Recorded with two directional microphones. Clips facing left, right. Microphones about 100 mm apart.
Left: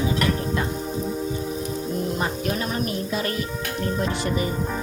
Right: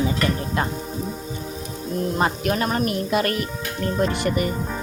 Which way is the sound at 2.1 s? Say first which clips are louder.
Right 4 dB; 70° right (ahead or behind).